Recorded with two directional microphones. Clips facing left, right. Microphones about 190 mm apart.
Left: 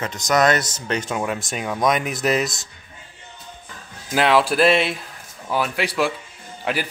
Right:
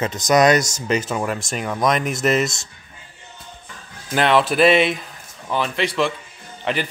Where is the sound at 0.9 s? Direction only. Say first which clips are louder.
Right 2 dB; 5° right (ahead or behind).